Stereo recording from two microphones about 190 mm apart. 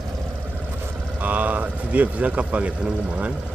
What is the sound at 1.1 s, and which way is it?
A man's voice, 10° right (ahead or behind).